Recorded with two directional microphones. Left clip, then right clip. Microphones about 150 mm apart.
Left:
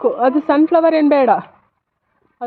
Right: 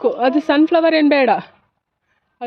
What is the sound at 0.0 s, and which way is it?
A woman's voice, 15° right (ahead or behind).